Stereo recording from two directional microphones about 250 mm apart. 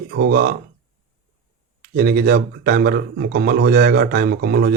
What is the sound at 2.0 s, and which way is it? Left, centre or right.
Speech, right.